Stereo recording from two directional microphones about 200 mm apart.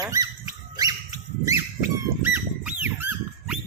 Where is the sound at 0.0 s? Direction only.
20° right (ahead or behind).